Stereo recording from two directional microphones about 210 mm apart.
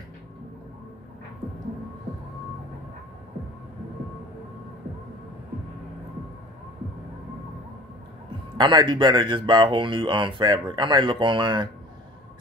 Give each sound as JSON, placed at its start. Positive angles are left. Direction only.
{"t": 8.5, "sound": "speech", "side_deg": -20}